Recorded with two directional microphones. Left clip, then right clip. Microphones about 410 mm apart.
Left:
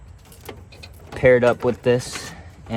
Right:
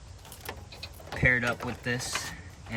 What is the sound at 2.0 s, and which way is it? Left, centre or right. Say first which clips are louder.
Speech: left 2 dB; right.